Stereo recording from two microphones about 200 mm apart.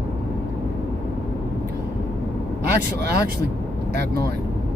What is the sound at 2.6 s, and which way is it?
Speech, 55° right (ahead or behind).